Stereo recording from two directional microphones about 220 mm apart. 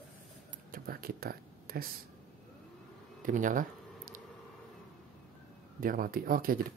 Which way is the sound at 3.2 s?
35° right (ahead or behind).